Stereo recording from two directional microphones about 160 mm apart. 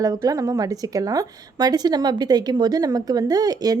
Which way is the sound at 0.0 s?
25° right (ahead or behind).